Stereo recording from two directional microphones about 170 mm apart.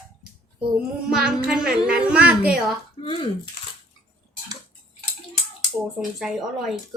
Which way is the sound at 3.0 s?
30° left (ahead or behind).